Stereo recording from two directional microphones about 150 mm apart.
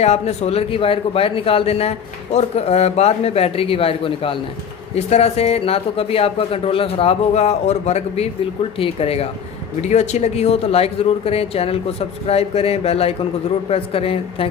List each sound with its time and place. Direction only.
0.0 s a man's voice: 50° left (ahead or behind)